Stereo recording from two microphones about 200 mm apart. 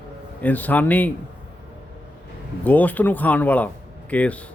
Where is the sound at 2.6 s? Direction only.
10° left (ahead or behind).